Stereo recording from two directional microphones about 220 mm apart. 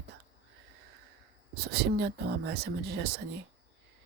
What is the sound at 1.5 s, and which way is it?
Speech, 45° right (ahead or behind).